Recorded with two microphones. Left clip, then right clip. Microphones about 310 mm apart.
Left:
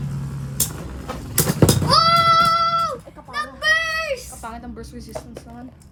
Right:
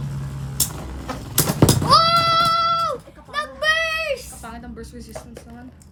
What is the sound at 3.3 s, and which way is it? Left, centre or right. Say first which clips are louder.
Child singing: left 1 dB; centre.